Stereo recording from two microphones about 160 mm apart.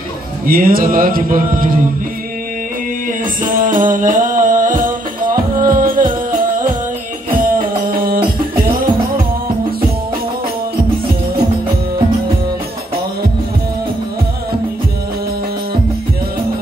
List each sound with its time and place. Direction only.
0.5 s mantra: 65° right (ahead or behind)
3.4 s music: 60° right (ahead or behind)
8.4 s music: 30° right (ahead or behind)